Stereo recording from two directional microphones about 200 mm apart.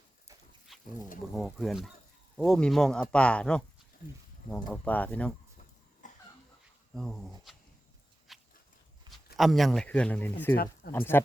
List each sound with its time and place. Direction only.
0.7 s a sound: centre (ahead or behind)
1.3 s speech: centre (ahead or behind)
6.0 s cough: 40° left (ahead or behind)
6.9 s speech: centre (ahead or behind)
8.3 s a sound: centre (ahead or behind)
9.0 s speech: centre (ahead or behind)